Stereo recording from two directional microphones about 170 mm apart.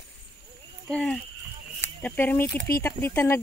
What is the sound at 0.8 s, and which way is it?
Speech, 5° left (ahead or behind).